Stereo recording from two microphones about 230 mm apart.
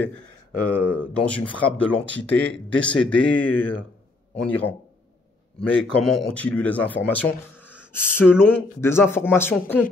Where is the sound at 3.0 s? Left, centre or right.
Centre.